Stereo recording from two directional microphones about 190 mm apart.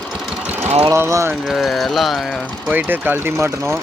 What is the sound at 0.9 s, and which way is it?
Speech, 15° right (ahead or behind).